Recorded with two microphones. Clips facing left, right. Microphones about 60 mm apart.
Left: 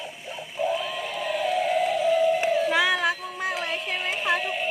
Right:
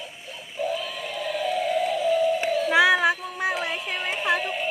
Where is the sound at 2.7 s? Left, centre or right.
Centre.